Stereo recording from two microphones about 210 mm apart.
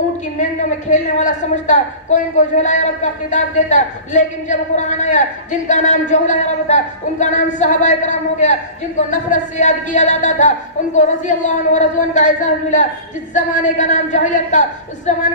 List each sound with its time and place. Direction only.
0.3 s a woman's voice: 35° left (ahead or behind)